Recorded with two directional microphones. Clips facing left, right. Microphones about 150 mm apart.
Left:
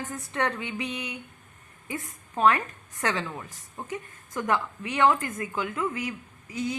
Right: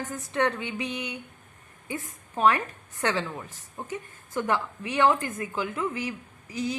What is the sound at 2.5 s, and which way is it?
A woman's voice, 30° right (ahead or behind).